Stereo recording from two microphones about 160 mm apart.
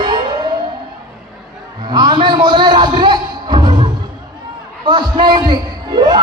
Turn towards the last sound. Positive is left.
turn(degrees=-25)  # may be behind; listen again after turning